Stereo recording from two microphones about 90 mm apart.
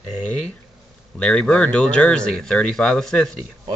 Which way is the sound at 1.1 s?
10° left (ahead or behind).